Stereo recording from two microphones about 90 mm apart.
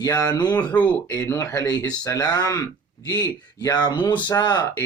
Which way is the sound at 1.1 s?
30° left (ahead or behind).